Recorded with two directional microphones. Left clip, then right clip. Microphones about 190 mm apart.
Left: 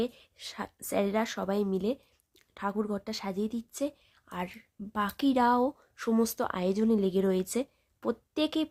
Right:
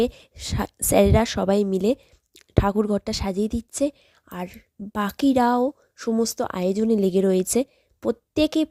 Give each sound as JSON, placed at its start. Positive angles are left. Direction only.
{"t": 0.0, "sound": "a woman's voice", "side_deg": -40}